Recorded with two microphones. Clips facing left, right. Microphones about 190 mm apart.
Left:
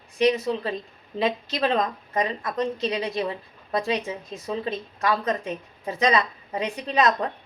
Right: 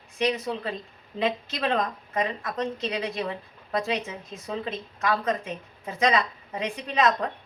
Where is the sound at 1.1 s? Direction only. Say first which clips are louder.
Left 2 dB; 30° left (ahead or behind).